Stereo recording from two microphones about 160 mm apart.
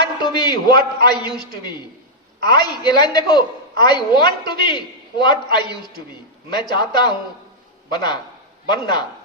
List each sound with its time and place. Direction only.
0.2 s a man's voice: 30° left (ahead or behind)
2.4 s a woman's voice: 30° left (ahead or behind)